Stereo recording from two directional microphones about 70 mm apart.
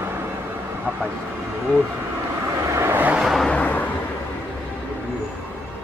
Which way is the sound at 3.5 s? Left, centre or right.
Left.